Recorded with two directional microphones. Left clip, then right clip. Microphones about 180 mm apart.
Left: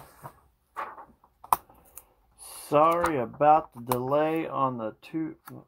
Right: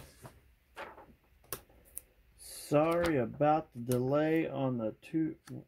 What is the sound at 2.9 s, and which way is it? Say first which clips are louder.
Speech: left 5 dB; 30° right (ahead or behind).